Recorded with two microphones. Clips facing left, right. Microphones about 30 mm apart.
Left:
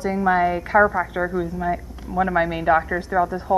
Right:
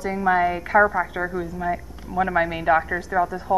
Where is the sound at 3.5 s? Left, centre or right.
Left.